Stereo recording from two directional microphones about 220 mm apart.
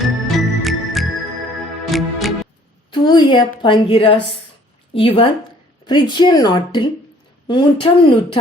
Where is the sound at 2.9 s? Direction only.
20° left (ahead or behind).